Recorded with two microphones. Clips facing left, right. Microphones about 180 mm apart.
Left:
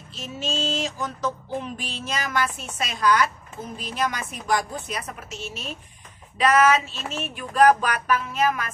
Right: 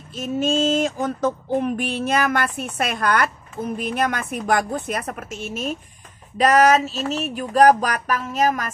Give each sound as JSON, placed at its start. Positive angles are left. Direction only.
{"t": 0.1, "sound": "music", "side_deg": -50}
{"t": 6.3, "sound": "speech", "side_deg": -40}